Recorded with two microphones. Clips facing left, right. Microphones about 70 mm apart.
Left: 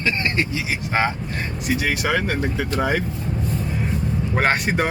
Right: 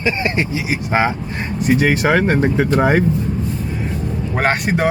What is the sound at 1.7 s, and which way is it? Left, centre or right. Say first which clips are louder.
Speech: right 7 dB; right.